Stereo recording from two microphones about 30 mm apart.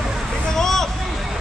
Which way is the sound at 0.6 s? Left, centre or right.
Centre.